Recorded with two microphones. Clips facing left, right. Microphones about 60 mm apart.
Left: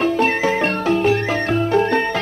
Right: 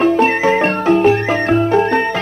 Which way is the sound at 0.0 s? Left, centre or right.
Right.